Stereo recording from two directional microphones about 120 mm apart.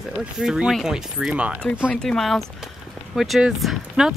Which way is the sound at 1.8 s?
5° left (ahead or behind).